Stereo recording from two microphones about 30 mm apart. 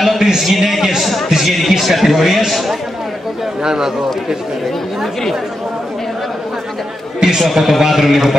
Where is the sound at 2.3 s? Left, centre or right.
Centre.